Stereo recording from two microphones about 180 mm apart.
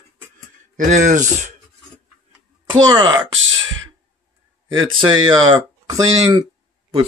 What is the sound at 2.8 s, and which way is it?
Speech, 20° right (ahead or behind).